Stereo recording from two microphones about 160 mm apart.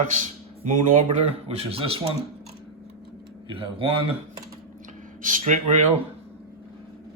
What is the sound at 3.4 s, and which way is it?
Speech, 35° right (ahead or behind).